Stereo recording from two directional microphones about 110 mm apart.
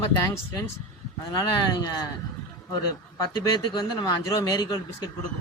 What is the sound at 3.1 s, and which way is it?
Speech, 35° left (ahead or behind).